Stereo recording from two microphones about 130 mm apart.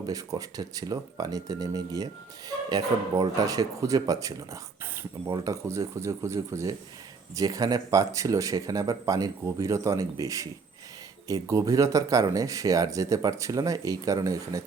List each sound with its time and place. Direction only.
0.0 s speech: 25° right (ahead or behind)